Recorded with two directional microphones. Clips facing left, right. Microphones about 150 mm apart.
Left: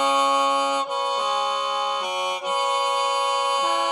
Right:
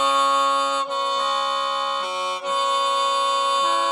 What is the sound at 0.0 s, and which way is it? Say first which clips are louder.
Music: even; 15° left (ahead or behind).